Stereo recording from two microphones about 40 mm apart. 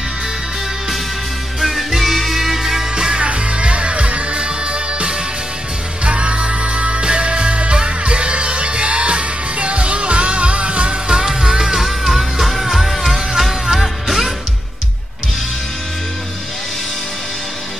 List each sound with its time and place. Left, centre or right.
1.6 s music: centre
3.2 s music: right; by 14.3 s centre